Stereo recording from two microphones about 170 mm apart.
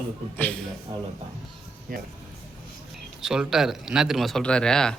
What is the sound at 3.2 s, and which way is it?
Speech, 5° right (ahead or behind).